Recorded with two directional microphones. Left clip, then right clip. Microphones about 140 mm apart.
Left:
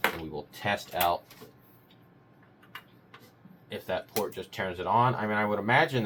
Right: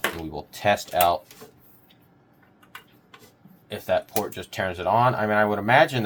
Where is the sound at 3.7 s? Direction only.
90° right.